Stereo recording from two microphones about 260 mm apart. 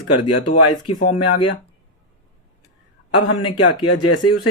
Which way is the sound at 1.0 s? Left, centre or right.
Left.